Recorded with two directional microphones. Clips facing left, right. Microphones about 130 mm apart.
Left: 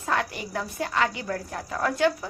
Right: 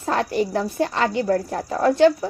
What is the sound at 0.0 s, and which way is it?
A woman's voice, 35° right (ahead or behind).